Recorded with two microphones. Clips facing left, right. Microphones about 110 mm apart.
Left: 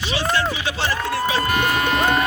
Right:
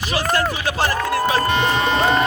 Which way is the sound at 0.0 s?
50° right (ahead or behind).